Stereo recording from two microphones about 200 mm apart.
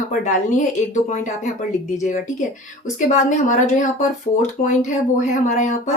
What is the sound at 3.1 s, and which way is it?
A woman's voice, 40° left (ahead or behind).